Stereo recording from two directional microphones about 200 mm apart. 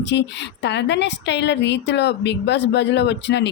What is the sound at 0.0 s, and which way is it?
A woman's voice, 60° left (ahead or behind).